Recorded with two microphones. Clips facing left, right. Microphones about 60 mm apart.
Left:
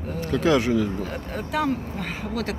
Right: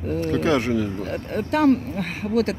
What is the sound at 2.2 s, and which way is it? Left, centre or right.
Speech, right.